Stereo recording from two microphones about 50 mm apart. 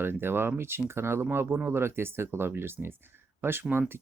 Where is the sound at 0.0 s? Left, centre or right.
Right.